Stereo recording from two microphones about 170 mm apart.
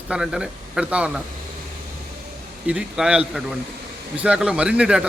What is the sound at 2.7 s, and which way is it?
A man's voice, 5° right (ahead or behind).